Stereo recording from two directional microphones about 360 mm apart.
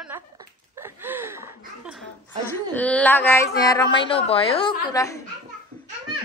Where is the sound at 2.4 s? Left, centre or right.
Centre.